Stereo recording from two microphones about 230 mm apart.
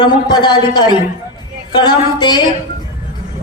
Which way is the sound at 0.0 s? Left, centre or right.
Centre.